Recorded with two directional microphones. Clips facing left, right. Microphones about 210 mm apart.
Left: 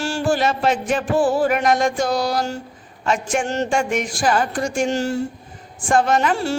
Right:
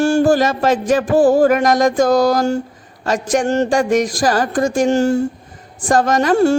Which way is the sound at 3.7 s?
40° right (ahead or behind).